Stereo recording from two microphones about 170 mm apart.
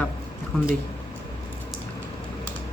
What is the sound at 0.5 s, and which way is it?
Speech, centre (ahead or behind).